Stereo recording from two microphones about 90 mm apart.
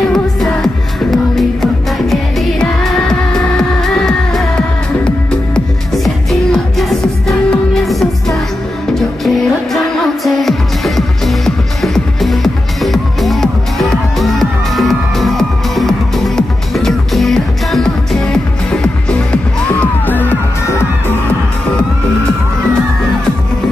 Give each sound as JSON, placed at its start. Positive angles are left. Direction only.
{"t": 0.1, "sound": "music", "side_deg": 5}
{"t": 6.0, "sound": "music", "side_deg": 0}
{"t": 11.0, "sound": "music", "side_deg": 0}